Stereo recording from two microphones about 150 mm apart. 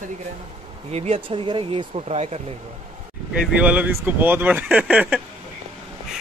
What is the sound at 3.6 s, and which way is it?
Speech, 10° right (ahead or behind).